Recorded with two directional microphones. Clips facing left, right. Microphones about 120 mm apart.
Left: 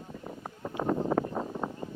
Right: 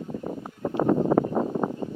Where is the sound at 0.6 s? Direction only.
50° right (ahead or behind).